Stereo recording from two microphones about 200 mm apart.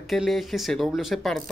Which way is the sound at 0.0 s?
Centre (ahead or behind).